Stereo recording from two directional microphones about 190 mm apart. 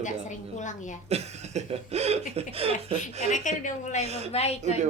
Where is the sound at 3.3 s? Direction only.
40° left (ahead or behind).